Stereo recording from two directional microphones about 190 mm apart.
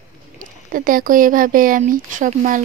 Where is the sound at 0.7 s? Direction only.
45° right (ahead or behind).